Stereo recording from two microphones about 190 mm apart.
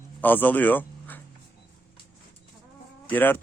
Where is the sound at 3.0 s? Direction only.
10° left (ahead or behind).